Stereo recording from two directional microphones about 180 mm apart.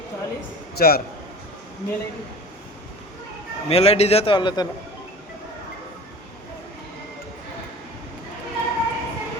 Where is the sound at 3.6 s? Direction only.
35° left (ahead or behind).